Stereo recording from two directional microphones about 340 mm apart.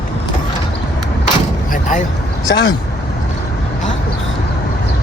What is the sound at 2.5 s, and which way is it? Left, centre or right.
Speech, left.